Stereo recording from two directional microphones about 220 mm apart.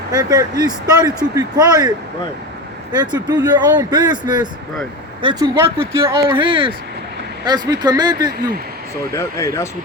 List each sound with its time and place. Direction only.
0.1 s speech: 15° right (ahead or behind)
3.0 s speech: 20° right (ahead or behind)
9.1 s speech: 15° left (ahead or behind)